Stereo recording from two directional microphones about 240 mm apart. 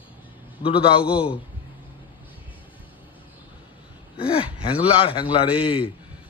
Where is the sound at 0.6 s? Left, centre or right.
Left.